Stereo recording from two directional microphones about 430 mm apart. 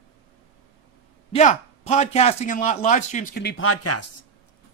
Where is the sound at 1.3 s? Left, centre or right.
Centre; by 4.0 s left.